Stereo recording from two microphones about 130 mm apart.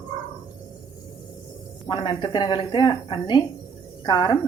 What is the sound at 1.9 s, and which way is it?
A woman's voice, 35° left (ahead or behind).